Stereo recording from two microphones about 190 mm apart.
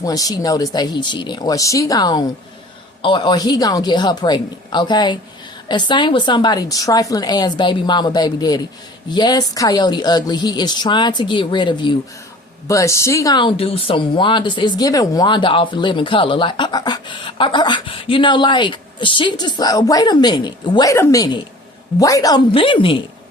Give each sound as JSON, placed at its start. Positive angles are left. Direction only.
{"t": 0.0, "sound": "speech", "side_deg": 20}